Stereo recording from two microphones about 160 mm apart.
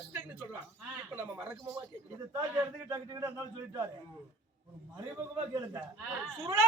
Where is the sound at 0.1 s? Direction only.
15° right (ahead or behind).